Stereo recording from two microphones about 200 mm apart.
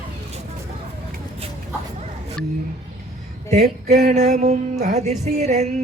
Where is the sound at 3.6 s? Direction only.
35° right (ahead or behind).